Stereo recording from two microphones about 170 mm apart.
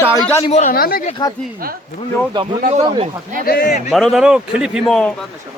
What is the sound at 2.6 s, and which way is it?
Speech, 45° right (ahead or behind).